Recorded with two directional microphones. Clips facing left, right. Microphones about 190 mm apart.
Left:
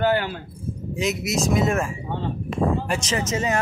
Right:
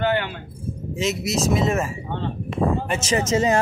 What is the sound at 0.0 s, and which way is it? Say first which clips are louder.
Keys jangling: left 1 dB; 40° left (ahead or behind).